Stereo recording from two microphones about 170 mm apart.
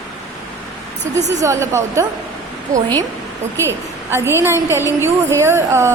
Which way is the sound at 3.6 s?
15° right (ahead or behind).